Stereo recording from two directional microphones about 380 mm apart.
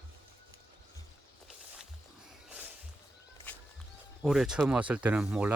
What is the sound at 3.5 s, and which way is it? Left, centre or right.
Music, centre.